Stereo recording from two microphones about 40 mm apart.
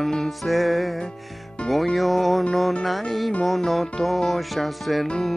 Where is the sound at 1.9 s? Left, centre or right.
Centre.